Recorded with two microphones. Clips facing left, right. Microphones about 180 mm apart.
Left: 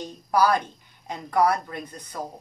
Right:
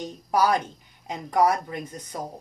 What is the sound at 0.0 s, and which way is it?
Speech, 20° right (ahead or behind).